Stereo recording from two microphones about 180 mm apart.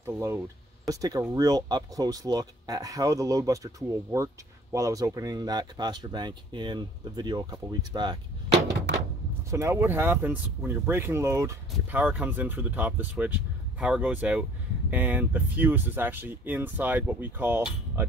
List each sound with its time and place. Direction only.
0.0 s speech: 15° right (ahead or behind)
9.5 s speech: 15° right (ahead or behind)